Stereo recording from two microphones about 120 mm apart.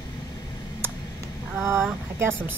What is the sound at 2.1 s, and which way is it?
Speech, 20° right (ahead or behind).